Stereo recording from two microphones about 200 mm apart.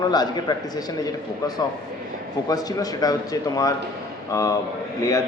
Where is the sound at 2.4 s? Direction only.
20° left (ahead or behind).